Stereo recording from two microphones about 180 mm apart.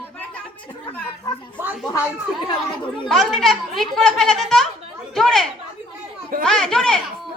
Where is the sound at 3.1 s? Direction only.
Centre (ahead or behind).